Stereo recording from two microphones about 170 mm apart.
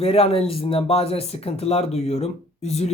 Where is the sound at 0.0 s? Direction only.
35° left (ahead or behind).